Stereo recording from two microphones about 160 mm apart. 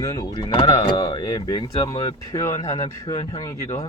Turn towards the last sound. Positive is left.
turn(degrees=20)  # may be behind; listen again after turning